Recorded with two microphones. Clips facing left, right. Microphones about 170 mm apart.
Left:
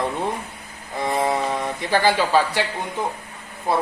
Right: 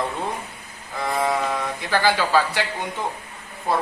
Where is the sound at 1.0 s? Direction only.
25° left (ahead or behind).